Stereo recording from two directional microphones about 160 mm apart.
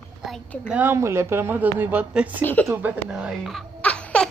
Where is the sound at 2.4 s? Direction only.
10° left (ahead or behind).